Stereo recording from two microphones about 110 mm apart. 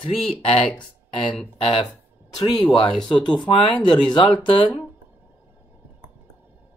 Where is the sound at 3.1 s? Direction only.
40° left (ahead or behind).